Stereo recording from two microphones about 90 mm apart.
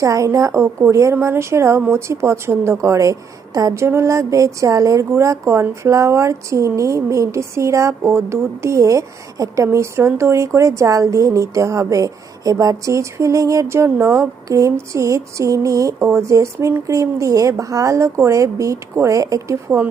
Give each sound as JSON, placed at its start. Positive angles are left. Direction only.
{"t": 0.0, "sound": "a woman's voice", "side_deg": -35}